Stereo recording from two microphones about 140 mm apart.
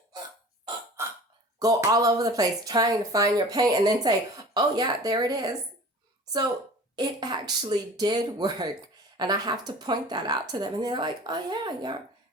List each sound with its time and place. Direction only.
1.0 s hiccup: 20° right (ahead or behind)
1.5 s a woman's voice: 25° right (ahead or behind)
6.9 s a woman's voice: 30° right (ahead or behind)